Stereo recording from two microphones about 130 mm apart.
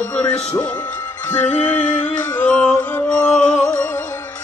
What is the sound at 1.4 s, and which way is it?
Music, 65° left (ahead or behind).